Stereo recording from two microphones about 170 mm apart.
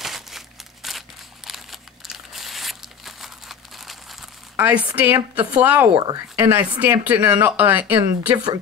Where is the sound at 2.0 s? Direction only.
Centre (ahead or behind).